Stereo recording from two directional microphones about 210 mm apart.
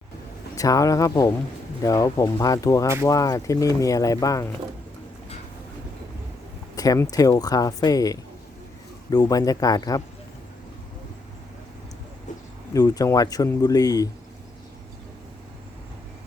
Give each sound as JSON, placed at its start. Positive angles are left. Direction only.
{"t": 0.5, "sound": "speech", "side_deg": 15}
{"t": 6.7, "sound": "speech", "side_deg": 15}
{"t": 12.7, "sound": "speech", "side_deg": 15}